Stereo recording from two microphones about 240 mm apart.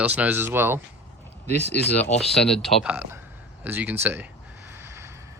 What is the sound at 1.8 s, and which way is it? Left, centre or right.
Speech, centre.